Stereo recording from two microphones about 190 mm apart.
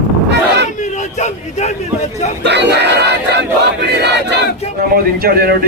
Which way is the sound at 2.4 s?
65° right (ahead or behind).